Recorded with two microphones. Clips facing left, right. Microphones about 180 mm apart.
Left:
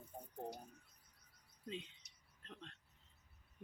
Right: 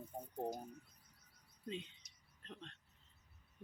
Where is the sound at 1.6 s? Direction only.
Centre (ahead or behind).